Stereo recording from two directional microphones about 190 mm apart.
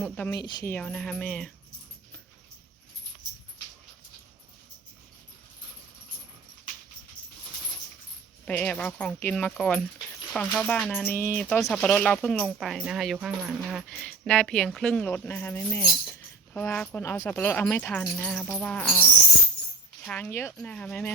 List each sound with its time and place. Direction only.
0.3 s speech: 20° left (ahead or behind)
0.7 s speech: 5° left (ahead or behind)
8.4 s speech: 5° left (ahead or behind)
20.1 s speech: 5° left (ahead or behind)